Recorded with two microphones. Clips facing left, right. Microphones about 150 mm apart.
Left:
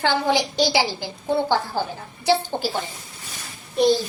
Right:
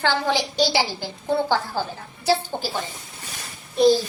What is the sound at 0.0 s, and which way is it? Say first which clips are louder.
A woman's voice: left 2 dB; 15° left (ahead or behind).